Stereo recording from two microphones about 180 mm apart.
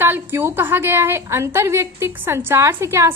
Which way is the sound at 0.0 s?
10° right (ahead or behind).